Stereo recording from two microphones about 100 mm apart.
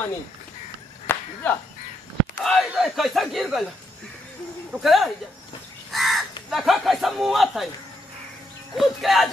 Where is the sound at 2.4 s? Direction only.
5° left (ahead or behind).